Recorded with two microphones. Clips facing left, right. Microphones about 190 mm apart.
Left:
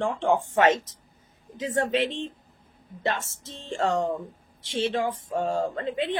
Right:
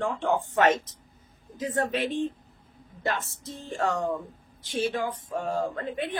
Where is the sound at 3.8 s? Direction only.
20° left (ahead or behind).